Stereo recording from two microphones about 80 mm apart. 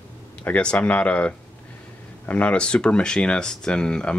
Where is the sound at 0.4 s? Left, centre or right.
Centre.